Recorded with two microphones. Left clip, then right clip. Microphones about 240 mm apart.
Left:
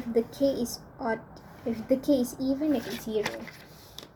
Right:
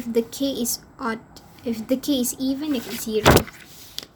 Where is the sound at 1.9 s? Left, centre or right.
Right.